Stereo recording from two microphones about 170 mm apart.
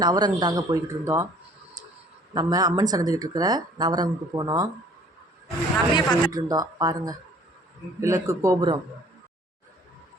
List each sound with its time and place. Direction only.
0.0 s speech: 25° right (ahead or behind)
2.3 s speech: 20° right (ahead or behind)
5.9 s speech: 25° left (ahead or behind)
6.3 s a man's voice: 20° right (ahead or behind)